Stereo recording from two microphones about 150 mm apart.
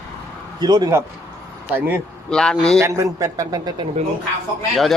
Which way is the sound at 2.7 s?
20° right (ahead or behind).